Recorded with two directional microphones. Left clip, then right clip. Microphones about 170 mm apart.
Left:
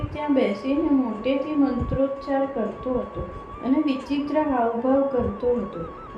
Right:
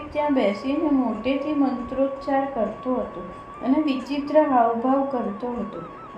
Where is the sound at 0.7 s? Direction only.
55° right (ahead or behind).